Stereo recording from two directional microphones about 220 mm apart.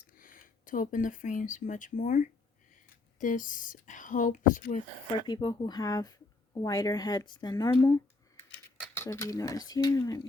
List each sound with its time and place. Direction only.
0.2 s speech: 40° left (ahead or behind)
5.1 s speech: 20° left (ahead or behind)
9.0 s speech: 10° left (ahead or behind)